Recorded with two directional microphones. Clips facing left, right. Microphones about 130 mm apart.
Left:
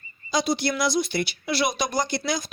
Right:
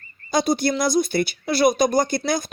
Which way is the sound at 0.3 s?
50° right (ahead or behind).